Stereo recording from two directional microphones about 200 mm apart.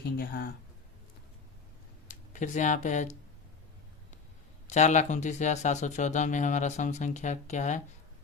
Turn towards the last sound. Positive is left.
turn(degrees=35)  # may be behind; listen again after turning